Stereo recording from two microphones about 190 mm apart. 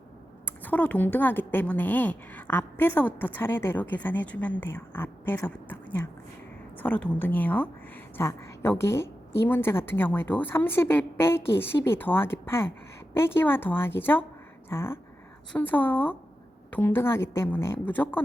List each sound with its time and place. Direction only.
0.4 s a woman's voice: 10° left (ahead or behind)